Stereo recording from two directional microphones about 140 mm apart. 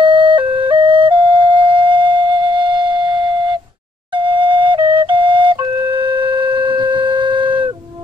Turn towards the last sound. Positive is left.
turn(degrees=-35)  # may be behind; listen again after turning